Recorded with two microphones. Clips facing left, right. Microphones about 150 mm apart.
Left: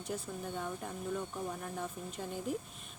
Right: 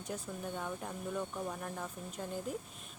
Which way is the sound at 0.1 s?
Centre (ahead or behind).